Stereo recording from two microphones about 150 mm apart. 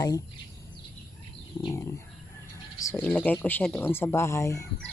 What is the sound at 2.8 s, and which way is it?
Speech, 20° left (ahead or behind).